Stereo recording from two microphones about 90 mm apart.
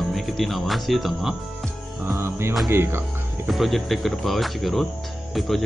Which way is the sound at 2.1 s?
30° right (ahead or behind).